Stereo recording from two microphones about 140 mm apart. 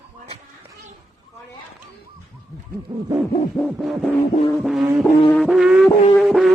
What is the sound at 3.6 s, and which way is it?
Music, 15° left (ahead or behind).